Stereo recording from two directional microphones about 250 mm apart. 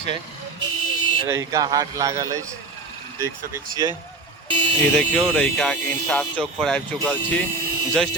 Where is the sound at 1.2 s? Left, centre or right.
Centre.